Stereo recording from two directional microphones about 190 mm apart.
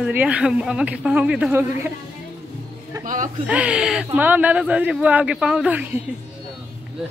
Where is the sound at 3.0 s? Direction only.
45° right (ahead or behind).